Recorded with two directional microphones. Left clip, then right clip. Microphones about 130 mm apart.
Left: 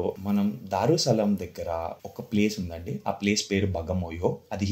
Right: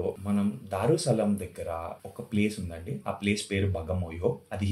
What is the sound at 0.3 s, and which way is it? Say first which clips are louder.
Speech: left 3 dB; 55° left (ahead or behind).